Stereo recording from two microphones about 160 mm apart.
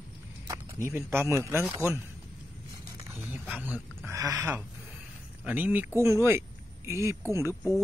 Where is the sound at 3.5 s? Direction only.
10° right (ahead or behind).